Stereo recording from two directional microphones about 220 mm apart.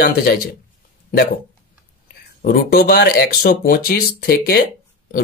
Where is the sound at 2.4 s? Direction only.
40° left (ahead or behind).